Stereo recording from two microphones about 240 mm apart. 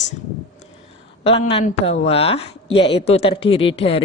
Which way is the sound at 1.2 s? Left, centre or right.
Left.